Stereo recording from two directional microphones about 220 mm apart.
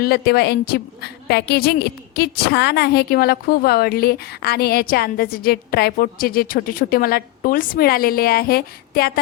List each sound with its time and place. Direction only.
0.0 s a woman's voice: 45° left (ahead or behind)